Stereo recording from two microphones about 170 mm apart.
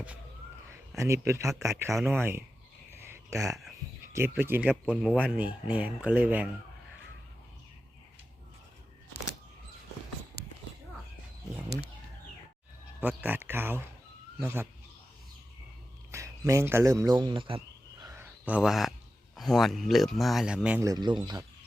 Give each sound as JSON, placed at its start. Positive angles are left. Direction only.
{"t": 0.9, "sound": "speech", "side_deg": -15}
{"t": 1.9, "sound": "speech", "side_deg": 0}
{"t": 3.3, "sound": "speech", "side_deg": -15}
{"t": 13.0, "sound": "speech", "side_deg": -10}
{"t": 16.1, "sound": "speech", "side_deg": -20}
{"t": 18.0, "sound": "a sound", "side_deg": -15}
{"t": 19.4, "sound": "speech", "side_deg": 0}
{"t": 20.8, "sound": "speech", "side_deg": -25}